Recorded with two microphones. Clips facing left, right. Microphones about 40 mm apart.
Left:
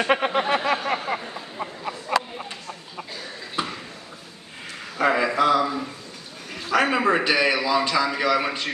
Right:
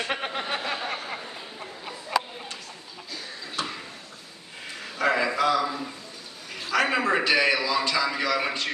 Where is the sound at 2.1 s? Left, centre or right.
Left.